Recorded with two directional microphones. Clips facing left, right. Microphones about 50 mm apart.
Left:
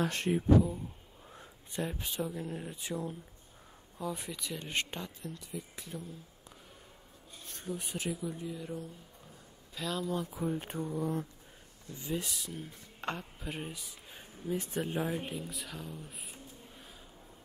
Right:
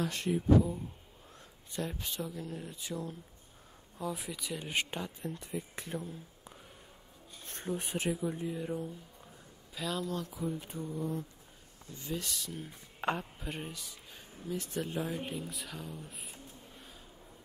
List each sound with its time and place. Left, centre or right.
0.0 s speech: left
1.3 s a sound: centre
2.1 s speech: left
4.0 s speech: centre
5.2 s speech: right
7.4 s speech: right
8.1 s speech: right
9.8 s speech: centre
10.3 s speech: left
12.0 s speech: centre
12.6 s speech: centre
13.4 s speech: centre; by 14.8 s left
14.8 s speech: centre
15.2 s speech: centre